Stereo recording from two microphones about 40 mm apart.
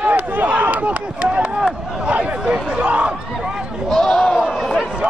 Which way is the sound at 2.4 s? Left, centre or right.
Right.